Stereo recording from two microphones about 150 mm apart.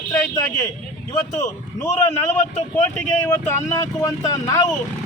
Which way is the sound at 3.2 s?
15° left (ahead or behind).